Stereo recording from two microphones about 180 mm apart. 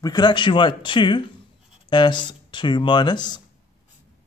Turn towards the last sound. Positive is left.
turn(degrees=25)  # may be behind; listen again after turning